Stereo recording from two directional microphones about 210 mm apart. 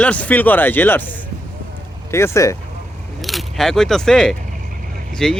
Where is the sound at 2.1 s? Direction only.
10° left (ahead or behind).